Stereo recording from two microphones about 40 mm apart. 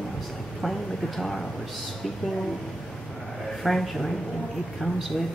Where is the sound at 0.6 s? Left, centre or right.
Centre.